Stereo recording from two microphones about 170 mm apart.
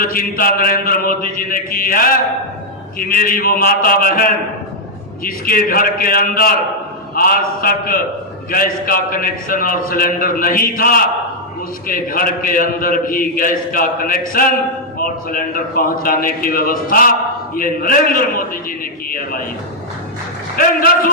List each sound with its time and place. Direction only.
0.0 s a man's voice: 55° left (ahead or behind)
20.6 s a man's voice: 60° left (ahead or behind)